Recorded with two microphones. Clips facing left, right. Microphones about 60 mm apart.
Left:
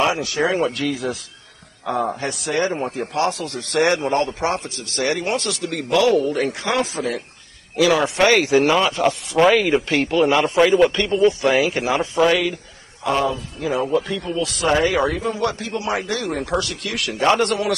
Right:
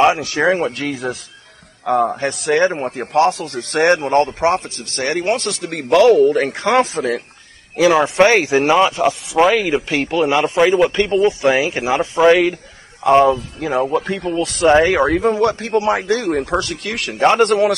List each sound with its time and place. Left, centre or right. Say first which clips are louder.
0.0 s speech: right 5 dB; right
2.1 s speech: right 6 dB; right
7.7 s speech: right 4 dB; right
9.0 s speech: right 2 dB; centre
10.9 s speech: right 2 dB; right
13.0 s speech: right 9 dB; right